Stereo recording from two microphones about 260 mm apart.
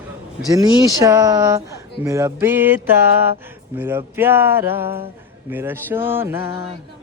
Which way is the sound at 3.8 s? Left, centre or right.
Centre.